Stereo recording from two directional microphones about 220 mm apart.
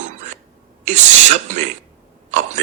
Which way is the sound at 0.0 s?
30° right (ahead or behind).